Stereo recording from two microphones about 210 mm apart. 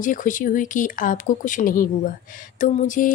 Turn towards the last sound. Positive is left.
turn(degrees=40)  # may be behind; listen again after turning